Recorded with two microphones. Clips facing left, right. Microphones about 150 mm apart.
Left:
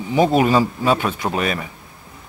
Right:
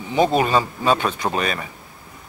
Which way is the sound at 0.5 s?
25° right (ahead or behind).